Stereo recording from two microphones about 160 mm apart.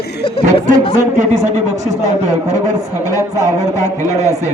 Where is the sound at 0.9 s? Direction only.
50° right (ahead or behind).